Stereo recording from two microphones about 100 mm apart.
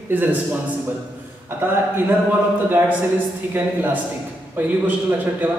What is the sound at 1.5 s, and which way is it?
A man's voice, 20° right (ahead or behind).